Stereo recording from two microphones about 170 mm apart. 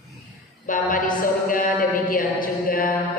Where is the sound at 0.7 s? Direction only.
55° left (ahead or behind).